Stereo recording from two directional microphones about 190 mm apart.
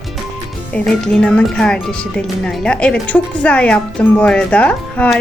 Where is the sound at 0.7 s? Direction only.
5° left (ahead or behind).